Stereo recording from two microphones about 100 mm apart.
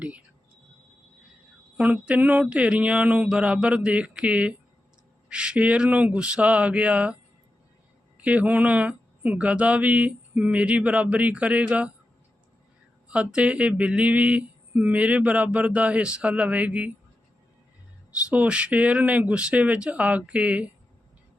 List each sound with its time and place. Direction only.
1.7 s mantra: 10° right (ahead or behind)
8.2 s mantra: 15° right (ahead or behind)
13.1 s mantra: 10° right (ahead or behind)
18.3 s mantra: 10° right (ahead or behind)